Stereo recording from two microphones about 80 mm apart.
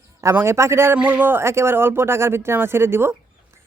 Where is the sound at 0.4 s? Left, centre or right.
Right.